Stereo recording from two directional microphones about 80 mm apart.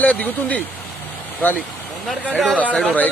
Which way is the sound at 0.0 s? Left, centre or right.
Centre.